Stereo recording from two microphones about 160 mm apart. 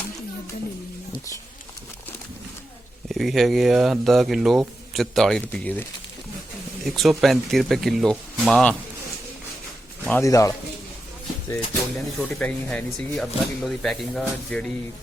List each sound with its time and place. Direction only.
3.1 s speech: centre (ahead or behind)
6.8 s speech: centre (ahead or behind)
10.1 s a man's voice: 20° left (ahead or behind)
11.5 s speech: 5° left (ahead or behind)